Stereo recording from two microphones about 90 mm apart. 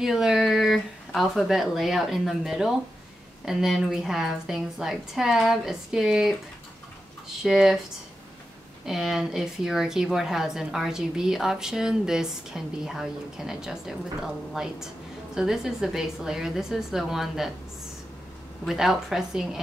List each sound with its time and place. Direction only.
0.0 s a woman's voice: 5° right (ahead or behind)
7.4 s a woman's voice: 5° right (ahead or behind)
8.8 s a woman's voice: 5° right (ahead or behind)
18.7 s a woman's voice: 5° right (ahead or behind)